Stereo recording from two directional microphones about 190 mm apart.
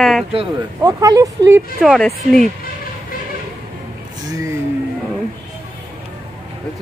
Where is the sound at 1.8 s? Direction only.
Centre (ahead or behind).